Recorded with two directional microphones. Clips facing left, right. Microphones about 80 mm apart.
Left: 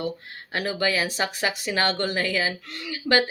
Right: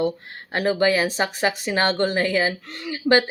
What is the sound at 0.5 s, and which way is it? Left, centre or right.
Speech, right.